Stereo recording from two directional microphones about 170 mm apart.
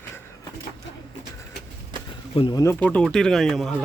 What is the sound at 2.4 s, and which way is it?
Speech, 25° left (ahead or behind).